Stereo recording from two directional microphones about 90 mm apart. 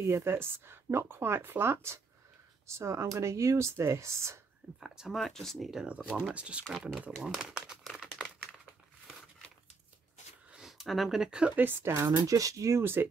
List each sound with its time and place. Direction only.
0.0 s speech: 30° right (ahead or behind)
4.7 s speech: 5° right (ahead or behind)
7.0 s crumpling: 5° right (ahead or behind)
10.5 s speech: 5° right (ahead or behind); by 12.1 s 25° right (ahead or behind)
12.2 s speech: 40° right (ahead or behind); by 13.1 s 25° right (ahead or behind)